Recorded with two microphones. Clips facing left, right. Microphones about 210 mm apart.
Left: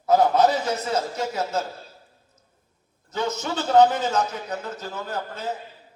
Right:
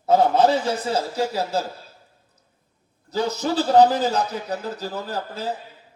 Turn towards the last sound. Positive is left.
turn(degrees=-35)  # may be behind; listen again after turning